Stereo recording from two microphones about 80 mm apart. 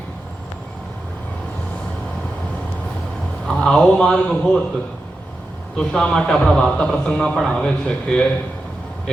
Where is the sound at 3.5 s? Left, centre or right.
Centre.